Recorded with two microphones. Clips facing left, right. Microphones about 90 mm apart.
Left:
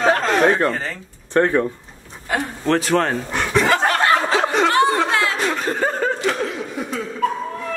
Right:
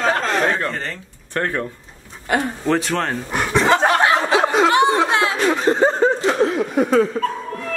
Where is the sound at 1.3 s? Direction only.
20° left (ahead or behind).